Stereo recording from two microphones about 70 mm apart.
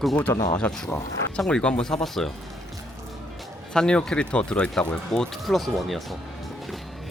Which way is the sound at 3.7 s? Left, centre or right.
Centre.